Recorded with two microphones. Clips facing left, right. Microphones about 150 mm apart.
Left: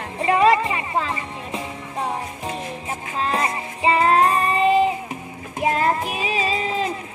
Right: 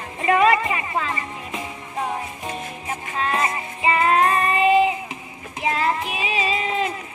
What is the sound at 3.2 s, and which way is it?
Music, 30° left (ahead or behind).